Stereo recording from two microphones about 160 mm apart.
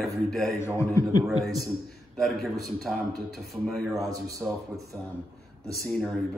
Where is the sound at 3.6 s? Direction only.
Centre (ahead or behind).